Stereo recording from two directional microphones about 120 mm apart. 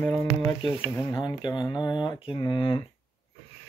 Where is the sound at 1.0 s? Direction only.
35° left (ahead or behind).